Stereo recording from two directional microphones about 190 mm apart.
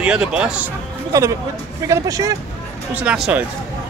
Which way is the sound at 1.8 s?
20° right (ahead or behind).